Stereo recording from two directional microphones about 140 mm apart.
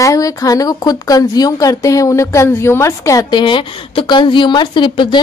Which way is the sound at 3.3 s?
35° left (ahead or behind).